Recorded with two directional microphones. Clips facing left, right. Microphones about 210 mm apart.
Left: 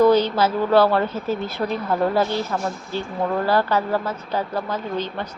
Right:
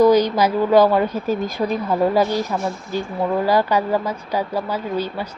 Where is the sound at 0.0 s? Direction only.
10° right (ahead or behind).